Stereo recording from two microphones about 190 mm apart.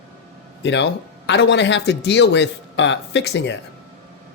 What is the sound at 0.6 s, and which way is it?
Speech, 70° left (ahead or behind).